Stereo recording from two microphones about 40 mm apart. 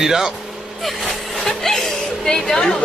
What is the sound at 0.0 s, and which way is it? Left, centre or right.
Speech, centre.